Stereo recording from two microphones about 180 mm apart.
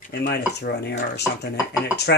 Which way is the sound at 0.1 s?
60° left (ahead or behind).